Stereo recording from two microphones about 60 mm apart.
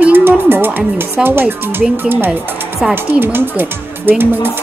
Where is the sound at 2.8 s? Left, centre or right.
Centre.